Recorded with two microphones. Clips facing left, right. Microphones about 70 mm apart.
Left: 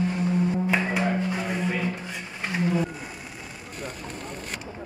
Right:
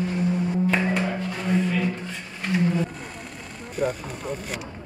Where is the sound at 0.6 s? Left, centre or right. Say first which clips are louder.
Right 2 dB; centre.